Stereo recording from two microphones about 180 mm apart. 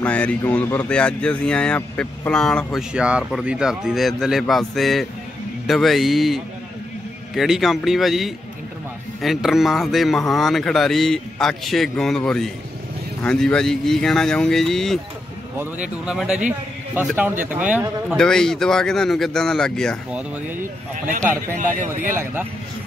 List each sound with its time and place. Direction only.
0.0 s speech: 5° left (ahead or behind)
15.5 s speech: 10° right (ahead or behind)
20.1 s speech: 10° right (ahead or behind)
21.5 s speech: 45° right (ahead or behind)
22.1 s speech: 10° right (ahead or behind)